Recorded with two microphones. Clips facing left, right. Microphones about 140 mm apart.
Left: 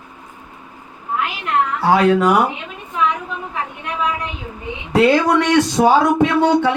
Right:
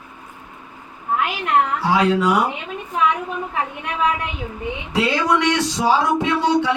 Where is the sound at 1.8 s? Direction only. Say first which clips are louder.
Left 4 dB; 55° left (ahead or behind).